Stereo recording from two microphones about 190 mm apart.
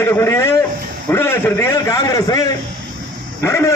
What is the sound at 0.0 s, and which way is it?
A man's voice, 15° left (ahead or behind).